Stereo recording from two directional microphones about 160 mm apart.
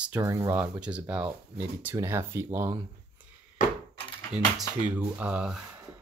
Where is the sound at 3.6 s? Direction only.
55° left (ahead or behind).